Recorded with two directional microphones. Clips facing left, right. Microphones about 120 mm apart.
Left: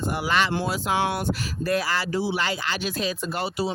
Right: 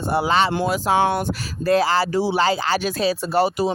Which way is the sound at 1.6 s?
30° right (ahead or behind).